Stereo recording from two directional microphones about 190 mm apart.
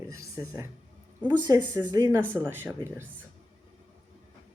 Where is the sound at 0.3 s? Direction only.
15° right (ahead or behind).